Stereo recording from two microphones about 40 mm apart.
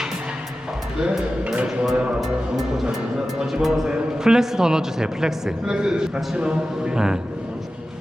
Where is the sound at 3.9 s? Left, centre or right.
Right.